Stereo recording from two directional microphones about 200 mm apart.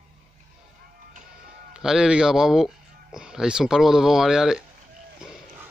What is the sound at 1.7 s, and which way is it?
Speech, 5° right (ahead or behind).